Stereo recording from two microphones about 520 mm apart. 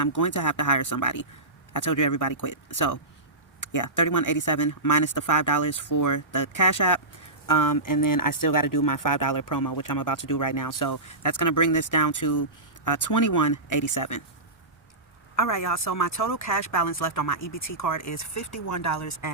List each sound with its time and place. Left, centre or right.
0.0 s speech: left
15.4 s speech: left